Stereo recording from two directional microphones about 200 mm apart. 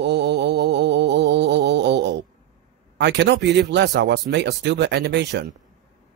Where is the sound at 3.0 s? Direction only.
60° right (ahead or behind).